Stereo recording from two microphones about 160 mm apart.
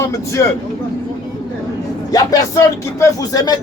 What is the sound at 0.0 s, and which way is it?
Speech, 20° left (ahead or behind).